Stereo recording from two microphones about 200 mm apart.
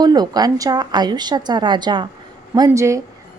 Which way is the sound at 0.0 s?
20° right (ahead or behind).